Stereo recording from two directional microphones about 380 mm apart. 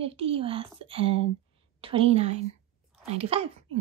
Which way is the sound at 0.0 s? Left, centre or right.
Centre.